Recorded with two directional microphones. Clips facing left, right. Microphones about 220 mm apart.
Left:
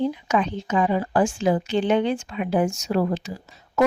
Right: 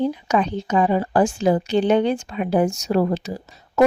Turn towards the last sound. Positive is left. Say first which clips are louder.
# right 4 dB
turn(degrees=-35)  # may be behind; listen again after turning